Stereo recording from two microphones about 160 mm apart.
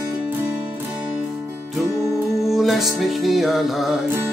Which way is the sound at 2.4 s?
Centre (ahead or behind).